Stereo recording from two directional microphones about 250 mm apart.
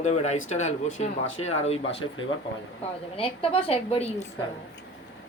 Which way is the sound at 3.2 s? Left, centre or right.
Left.